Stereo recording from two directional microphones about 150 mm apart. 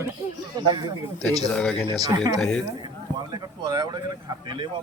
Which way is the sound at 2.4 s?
5° left (ahead or behind).